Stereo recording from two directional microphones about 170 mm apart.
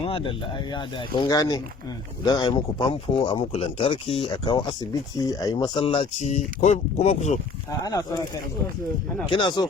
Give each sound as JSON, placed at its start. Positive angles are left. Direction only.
{"t": 0.0, "sound": "speech", "side_deg": 30}
{"t": 7.7, "sound": "speech", "side_deg": 20}
{"t": 9.3, "sound": "speech", "side_deg": 25}